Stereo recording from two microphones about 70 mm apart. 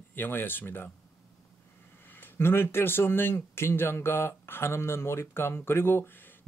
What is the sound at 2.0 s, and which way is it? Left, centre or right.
Speech, left.